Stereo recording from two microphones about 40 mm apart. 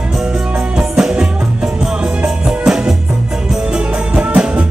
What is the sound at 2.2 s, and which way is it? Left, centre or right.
Music, centre.